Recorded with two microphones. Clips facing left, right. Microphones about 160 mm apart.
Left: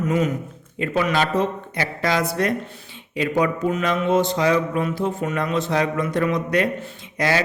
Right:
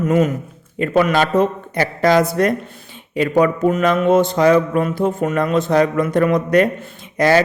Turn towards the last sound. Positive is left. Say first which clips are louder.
# right 7 dB
turn(degrees=-50)  # may be behind; listen again after turning